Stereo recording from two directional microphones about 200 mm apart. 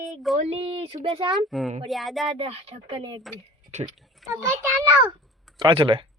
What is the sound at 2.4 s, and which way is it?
Speech, 30° right (ahead or behind).